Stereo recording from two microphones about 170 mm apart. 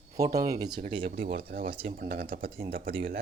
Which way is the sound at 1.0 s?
55° right (ahead or behind).